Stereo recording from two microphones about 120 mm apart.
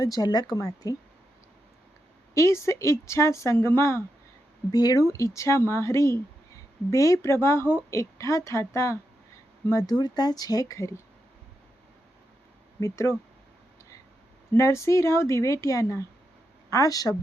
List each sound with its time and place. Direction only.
0.0 s speech: 30° left (ahead or behind)
2.3 s speech: 25° left (ahead or behind)
4.7 s speech: 35° left (ahead or behind)
10.0 s speech: 35° left (ahead or behind)
12.8 s speech: 25° left (ahead or behind)
14.5 s speech: 25° left (ahead or behind)